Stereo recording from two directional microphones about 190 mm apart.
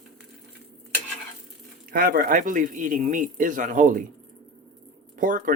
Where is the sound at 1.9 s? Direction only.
50° right (ahead or behind).